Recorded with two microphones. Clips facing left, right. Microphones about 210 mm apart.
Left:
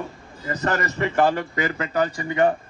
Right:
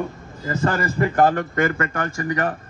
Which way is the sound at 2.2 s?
85° right.